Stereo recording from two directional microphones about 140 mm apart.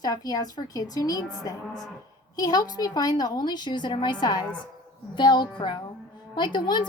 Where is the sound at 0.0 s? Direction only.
25° left (ahead or behind).